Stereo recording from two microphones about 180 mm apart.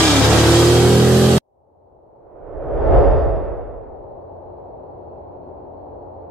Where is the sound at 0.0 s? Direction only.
Centre (ahead or behind).